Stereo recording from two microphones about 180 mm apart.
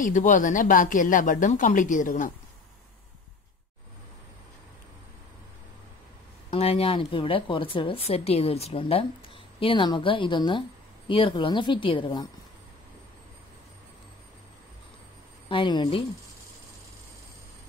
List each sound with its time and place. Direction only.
0.0 s speech: 45° left (ahead or behind)
6.5 s a woman's voice: 35° left (ahead or behind)
15.4 s a woman's voice: 30° left (ahead or behind)